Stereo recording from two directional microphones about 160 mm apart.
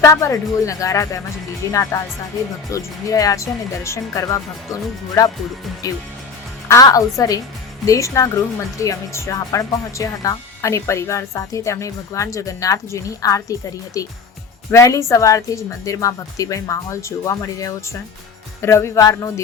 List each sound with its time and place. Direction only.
0.0 s speech: 20° left (ahead or behind)
6.7 s speech: 20° left (ahead or behind)